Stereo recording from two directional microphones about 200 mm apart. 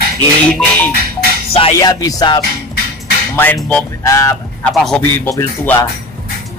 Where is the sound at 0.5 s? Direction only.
10° left (ahead or behind).